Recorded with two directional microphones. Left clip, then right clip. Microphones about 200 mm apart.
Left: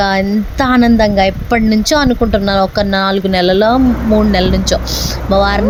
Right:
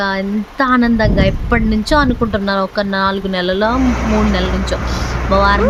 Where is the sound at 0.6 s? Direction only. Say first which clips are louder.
Left 3 dB; 20° left (ahead or behind).